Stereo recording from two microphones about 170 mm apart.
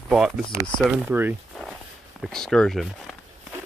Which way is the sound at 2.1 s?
Centre (ahead or behind).